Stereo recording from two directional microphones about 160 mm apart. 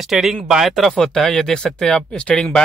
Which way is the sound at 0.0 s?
Centre (ahead or behind).